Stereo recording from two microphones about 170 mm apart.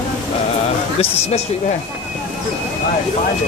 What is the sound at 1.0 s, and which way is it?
Speech, 40° left (ahead or behind).